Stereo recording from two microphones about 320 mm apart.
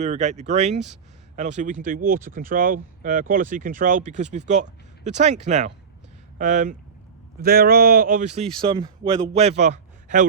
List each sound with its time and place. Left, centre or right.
0.0 s a man's voice: right